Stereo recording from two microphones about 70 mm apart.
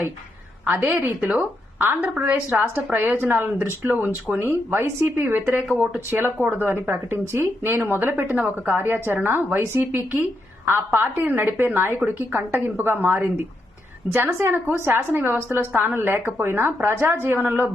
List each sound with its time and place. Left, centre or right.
0.6 s a woman's voice: right
3.2 s a woman's voice: right
5.2 s a woman's voice: right